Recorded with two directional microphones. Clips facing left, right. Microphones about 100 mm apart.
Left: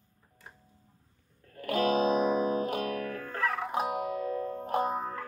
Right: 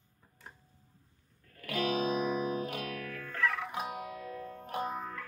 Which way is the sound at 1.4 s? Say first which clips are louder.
Left 6 dB; 35° left (ahead or behind).